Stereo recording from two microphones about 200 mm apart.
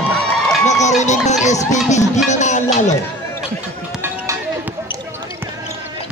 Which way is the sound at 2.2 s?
35° left (ahead or behind).